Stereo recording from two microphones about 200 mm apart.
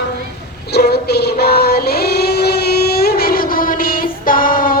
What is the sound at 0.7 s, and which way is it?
Child singing, 55° left (ahead or behind).